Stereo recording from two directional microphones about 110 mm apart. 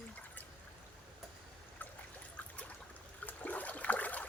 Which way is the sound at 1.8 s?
15° left (ahead or behind).